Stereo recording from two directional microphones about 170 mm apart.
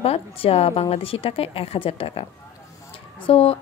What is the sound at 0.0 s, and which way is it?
A woman's voice, 35° left (ahead or behind).